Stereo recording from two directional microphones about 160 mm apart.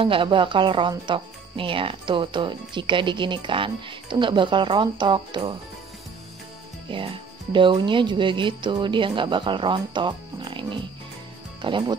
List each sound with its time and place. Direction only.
0.0 s speech: 35° right (ahead or behind)
6.9 s speech: 30° right (ahead or behind)